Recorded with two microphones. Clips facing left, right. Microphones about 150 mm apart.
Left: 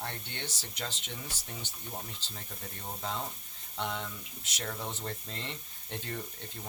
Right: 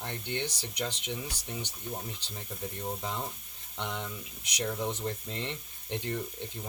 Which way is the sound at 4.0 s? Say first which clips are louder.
Right 2 dB; 15° right (ahead or behind).